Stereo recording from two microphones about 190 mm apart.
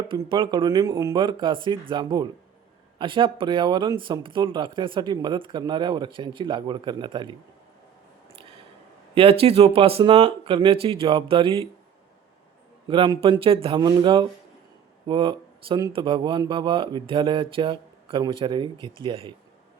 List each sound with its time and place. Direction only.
0.1 s speech: 25° right (ahead or behind)
9.1 s speech: 30° right (ahead or behind)
12.9 s speech: 25° right (ahead or behind)